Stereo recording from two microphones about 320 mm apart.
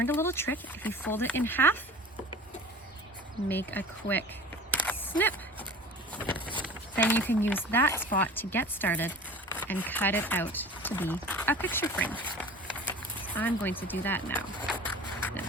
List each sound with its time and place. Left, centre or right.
0.0 s speech: centre
3.5 s speech: centre
4.7 s single-lens reflex camera: centre
6.1 s vehicle: centre
6.9 s speech: centre